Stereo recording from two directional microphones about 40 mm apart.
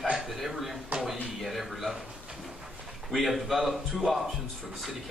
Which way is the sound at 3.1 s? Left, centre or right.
Centre.